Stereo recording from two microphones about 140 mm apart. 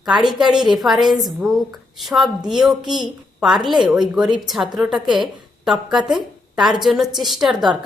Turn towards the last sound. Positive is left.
turn(degrees=0)  # may be behind; listen again after turning